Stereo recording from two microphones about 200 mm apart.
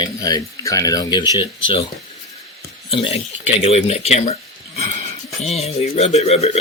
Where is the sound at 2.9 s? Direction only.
30° left (ahead or behind).